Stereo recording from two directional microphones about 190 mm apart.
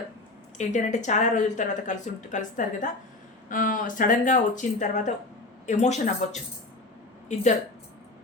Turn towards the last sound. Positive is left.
turn(degrees=40)  # may be behind; listen again after turning